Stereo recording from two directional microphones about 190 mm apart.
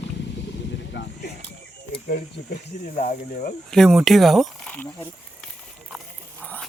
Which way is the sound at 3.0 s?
45° left (ahead or behind).